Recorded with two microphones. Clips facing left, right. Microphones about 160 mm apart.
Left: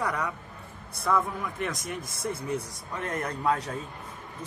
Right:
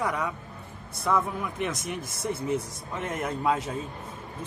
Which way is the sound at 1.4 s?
20° right (ahead or behind).